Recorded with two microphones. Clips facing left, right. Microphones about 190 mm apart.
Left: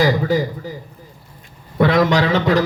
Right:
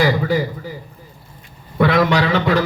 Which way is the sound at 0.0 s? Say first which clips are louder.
Left 1 dB; 40° left (ahead or behind).